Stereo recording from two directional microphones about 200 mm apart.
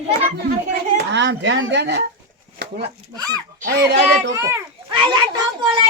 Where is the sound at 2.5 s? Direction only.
50° right (ahead or behind).